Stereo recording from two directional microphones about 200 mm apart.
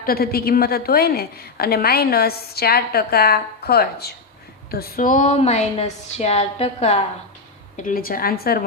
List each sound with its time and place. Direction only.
0.0 s a woman's voice: 50° left (ahead or behind); by 7.0 s 35° left (ahead or behind)
7.8 s a woman's voice: 45° left (ahead or behind)